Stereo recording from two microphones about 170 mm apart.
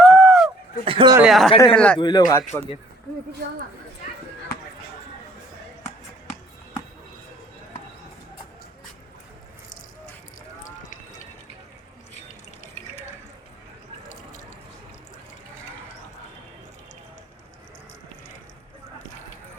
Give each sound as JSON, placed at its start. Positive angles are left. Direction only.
{"t": 0.0, "sound": "a sound", "side_deg": 5}
{"t": 0.9, "sound": "chuckle", "side_deg": -30}
{"t": 1.2, "sound": "speech", "side_deg": 0}
{"t": 1.5, "sound": "speech", "side_deg": 10}
{"t": 2.0, "sound": "speech", "side_deg": 25}